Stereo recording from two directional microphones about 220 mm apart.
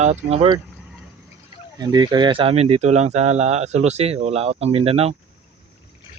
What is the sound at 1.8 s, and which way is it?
Speech, 20° right (ahead or behind).